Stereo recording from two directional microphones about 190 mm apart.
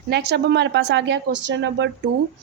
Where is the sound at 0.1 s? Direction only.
60° right (ahead or behind).